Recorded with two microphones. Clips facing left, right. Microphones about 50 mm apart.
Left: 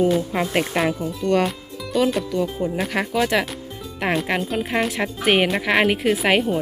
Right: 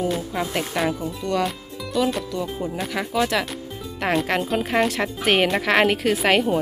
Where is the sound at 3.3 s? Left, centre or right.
Left.